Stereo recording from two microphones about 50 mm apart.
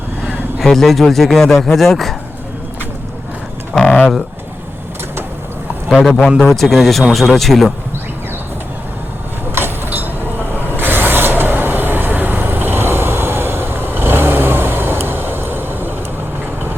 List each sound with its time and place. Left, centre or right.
0.6 s a man's voice: centre
3.8 s pigeon: left
6.1 s a man's voice: centre
9.6 s vehicle: right